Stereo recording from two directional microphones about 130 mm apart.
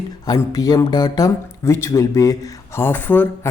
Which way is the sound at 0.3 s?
30° left (ahead or behind).